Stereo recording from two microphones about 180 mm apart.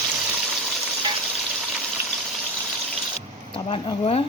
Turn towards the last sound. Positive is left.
turn(degrees=30)  # may be behind; listen again after turning